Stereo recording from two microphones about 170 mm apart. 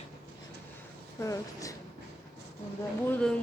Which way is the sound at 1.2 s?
20° left (ahead or behind).